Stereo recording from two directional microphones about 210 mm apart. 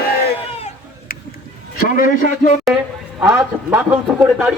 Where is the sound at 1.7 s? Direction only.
45° left (ahead or behind).